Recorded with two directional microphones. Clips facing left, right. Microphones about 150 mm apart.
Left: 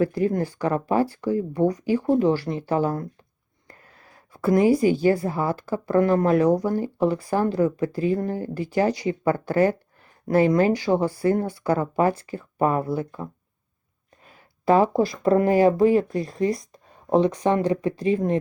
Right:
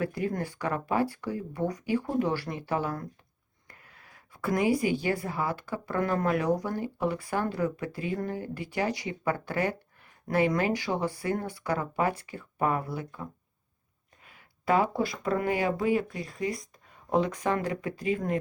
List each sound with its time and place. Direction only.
0.0 s speech: 30° left (ahead or behind)
3.7 s a sound: 35° left (ahead or behind)
5.2 s speech: 35° left (ahead or behind)
14.3 s speech: 35° left (ahead or behind)